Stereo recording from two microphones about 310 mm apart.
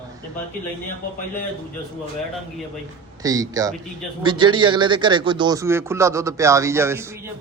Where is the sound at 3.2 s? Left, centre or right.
Centre.